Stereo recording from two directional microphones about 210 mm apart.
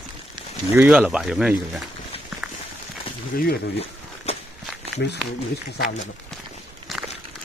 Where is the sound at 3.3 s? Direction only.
45° left (ahead or behind).